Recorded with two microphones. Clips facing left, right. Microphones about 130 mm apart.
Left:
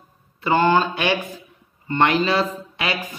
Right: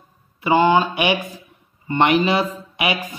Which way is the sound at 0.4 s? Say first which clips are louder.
Right 2 dB; 10° right (ahead or behind).